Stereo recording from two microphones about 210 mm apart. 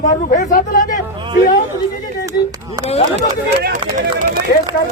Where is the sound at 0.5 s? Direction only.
40° left (ahead or behind).